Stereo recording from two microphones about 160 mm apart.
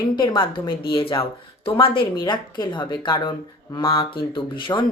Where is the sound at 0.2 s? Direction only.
30° left (ahead or behind).